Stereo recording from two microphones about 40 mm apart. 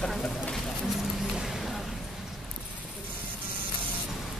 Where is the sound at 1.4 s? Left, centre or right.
Centre.